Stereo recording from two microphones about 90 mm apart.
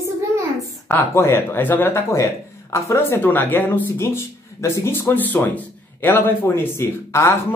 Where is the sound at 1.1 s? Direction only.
30° left (ahead or behind).